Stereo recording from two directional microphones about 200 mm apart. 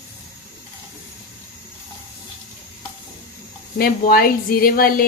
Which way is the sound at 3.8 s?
50° left (ahead or behind).